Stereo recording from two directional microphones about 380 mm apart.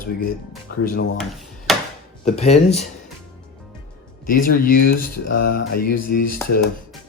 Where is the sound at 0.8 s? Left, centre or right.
Left.